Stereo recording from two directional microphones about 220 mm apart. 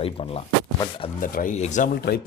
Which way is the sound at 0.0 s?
25° left (ahead or behind).